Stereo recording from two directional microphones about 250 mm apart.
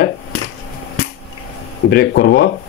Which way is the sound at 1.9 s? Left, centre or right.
Left.